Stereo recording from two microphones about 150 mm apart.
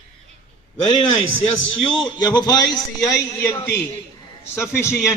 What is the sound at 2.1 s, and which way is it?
Speech, 30° left (ahead or behind).